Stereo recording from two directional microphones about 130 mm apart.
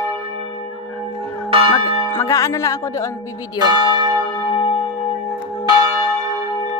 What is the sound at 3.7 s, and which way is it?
Church bell, 35° right (ahead or behind).